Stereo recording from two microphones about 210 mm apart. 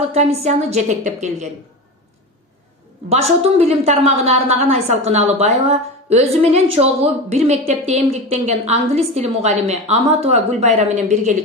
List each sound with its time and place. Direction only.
0.1 s a woman's voice: 30° right (ahead or behind)
3.1 s a woman's voice: 30° right (ahead or behind)